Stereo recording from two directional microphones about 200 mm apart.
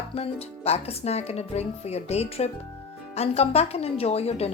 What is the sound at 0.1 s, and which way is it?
Speech, 30° left (ahead or behind).